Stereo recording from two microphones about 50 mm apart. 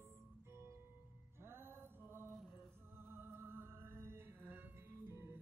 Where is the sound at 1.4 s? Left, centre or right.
Right.